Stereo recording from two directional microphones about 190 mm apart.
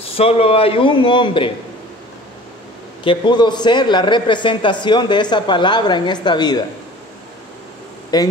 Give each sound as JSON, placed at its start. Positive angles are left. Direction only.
{"t": 0.1, "sound": "a man's voice", "side_deg": 30}
{"t": 3.0, "sound": "a man's voice", "side_deg": 25}
{"t": 8.1, "sound": "a man's voice", "side_deg": 20}